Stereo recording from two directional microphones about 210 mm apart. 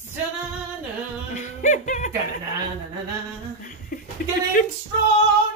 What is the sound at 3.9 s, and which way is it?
Chuckle, 45° left (ahead or behind).